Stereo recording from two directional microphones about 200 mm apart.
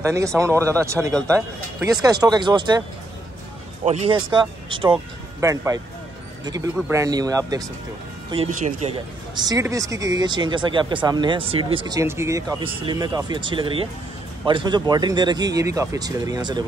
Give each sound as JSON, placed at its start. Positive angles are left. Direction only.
{"t": 0.0, "sound": "speech", "side_deg": -15}
{"t": 3.8, "sound": "speech", "side_deg": -30}
{"t": 8.5, "sound": "speech", "side_deg": -40}
{"t": 9.3, "sound": "speech", "side_deg": -20}